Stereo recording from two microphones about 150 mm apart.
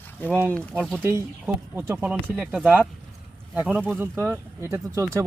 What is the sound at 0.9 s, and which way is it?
Speech, 15° right (ahead or behind).